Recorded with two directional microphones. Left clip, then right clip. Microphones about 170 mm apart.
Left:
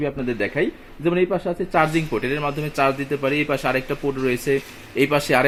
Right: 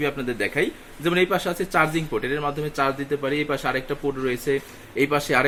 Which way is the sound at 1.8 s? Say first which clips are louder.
Left 2 dB; 30° left (ahead or behind).